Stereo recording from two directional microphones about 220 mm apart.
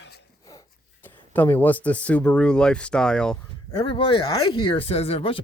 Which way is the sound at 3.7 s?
25° left (ahead or behind).